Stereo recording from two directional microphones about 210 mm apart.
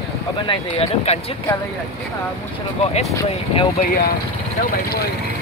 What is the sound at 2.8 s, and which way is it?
Speech, 30° left (ahead or behind).